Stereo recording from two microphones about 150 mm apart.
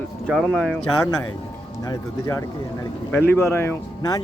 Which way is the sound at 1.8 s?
20° left (ahead or behind).